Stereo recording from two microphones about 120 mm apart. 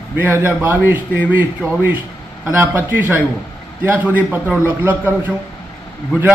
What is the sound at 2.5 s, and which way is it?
A man's voice, 15° right (ahead or behind).